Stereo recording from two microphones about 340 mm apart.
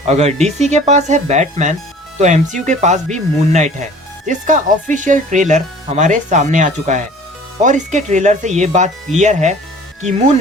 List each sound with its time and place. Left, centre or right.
0.1 s speech: centre